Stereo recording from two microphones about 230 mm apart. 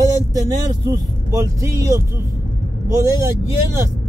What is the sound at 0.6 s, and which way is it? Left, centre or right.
Speech, centre.